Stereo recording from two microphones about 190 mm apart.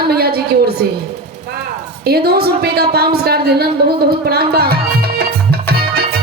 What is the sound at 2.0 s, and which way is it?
A woman's voice, 55° right (ahead or behind).